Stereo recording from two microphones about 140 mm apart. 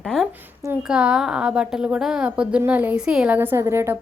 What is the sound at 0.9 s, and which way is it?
A woman's voice, 5° right (ahead or behind).